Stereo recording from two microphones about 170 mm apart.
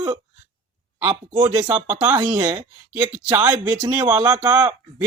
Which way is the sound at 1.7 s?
10° right (ahead or behind).